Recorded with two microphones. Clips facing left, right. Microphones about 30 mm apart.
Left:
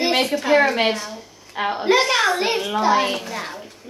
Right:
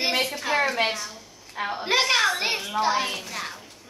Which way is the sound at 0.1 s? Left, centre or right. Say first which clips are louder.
Left 6 dB; left.